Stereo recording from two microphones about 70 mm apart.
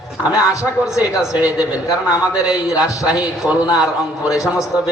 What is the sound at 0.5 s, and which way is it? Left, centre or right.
A man's voice, left.